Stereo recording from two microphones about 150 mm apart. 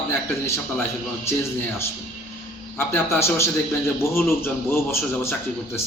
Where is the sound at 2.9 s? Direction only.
15° left (ahead or behind).